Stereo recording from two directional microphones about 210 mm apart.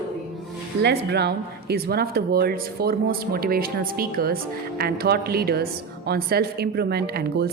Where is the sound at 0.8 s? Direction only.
55° right (ahead or behind).